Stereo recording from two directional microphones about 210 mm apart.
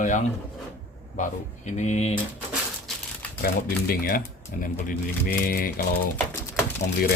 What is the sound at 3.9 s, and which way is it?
Speech, 45° left (ahead or behind).